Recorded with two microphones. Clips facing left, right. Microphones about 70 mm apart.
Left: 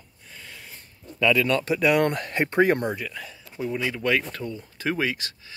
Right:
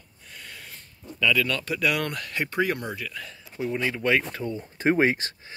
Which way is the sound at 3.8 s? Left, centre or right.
Centre.